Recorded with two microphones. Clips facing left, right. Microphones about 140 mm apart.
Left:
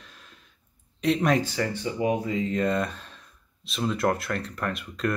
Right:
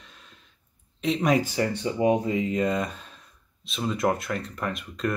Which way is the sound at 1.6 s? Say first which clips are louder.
Right 2 dB; 20° right (ahead or behind).